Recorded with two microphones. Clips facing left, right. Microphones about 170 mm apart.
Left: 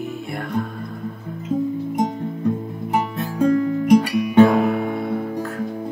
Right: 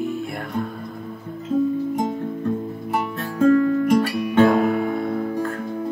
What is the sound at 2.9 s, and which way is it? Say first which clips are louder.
Music: left 3 dB; 15° left (ahead or behind).